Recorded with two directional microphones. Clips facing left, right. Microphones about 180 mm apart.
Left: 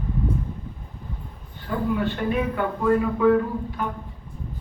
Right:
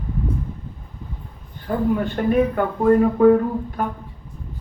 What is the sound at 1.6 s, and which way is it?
Speech, 45° right (ahead or behind).